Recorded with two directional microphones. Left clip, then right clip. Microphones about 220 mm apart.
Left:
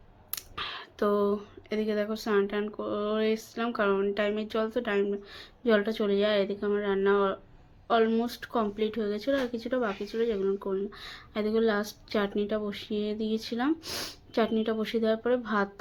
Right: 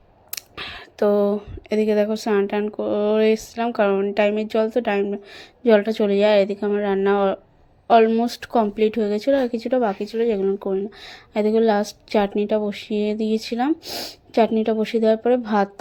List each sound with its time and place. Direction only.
0.3 s speech: 25° right (ahead or behind)